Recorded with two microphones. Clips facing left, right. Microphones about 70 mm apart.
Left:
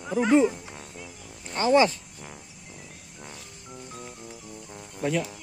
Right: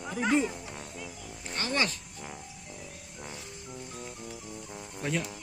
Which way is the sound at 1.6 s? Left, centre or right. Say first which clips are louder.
Left 11 dB; centre.